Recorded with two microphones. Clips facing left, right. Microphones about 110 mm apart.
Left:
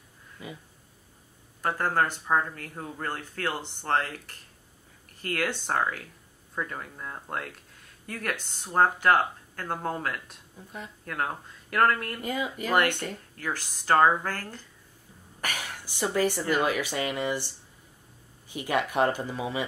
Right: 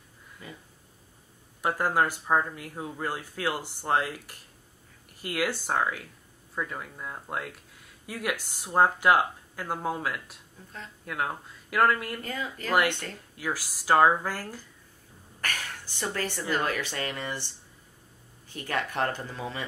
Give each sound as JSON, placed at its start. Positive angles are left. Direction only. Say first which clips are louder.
{"t": 0.4, "sound": "speech", "louder": "left 4 dB", "side_deg": 10}
{"t": 1.6, "sound": "speech", "louder": "right 1 dB", "side_deg": -10}
{"t": 10.6, "sound": "speech", "louder": "left 4 dB", "side_deg": 10}
{"t": 11.1, "sound": "speech", "louder": "even", "side_deg": 0}
{"t": 12.2, "sound": "speech", "louder": "left 4 dB", "side_deg": 15}
{"t": 13.4, "sound": "speech", "louder": "right 2 dB", "side_deg": -5}
{"t": 15.4, "sound": "speech", "louder": "left 1 dB", "side_deg": 10}
{"t": 18.5, "sound": "speech", "louder": "left 4 dB", "side_deg": 15}